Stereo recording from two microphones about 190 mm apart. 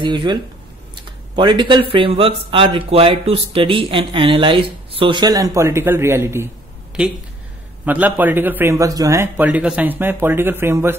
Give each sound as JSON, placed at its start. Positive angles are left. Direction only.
{"t": 0.0, "sound": "speech", "side_deg": -25}
{"t": 7.8, "sound": "a man's voice", "side_deg": -10}